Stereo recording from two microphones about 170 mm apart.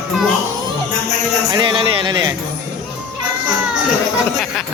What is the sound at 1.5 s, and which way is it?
Speech, 30° right (ahead or behind).